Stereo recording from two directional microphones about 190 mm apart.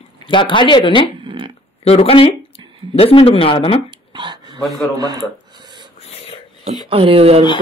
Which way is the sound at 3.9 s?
25° right (ahead or behind).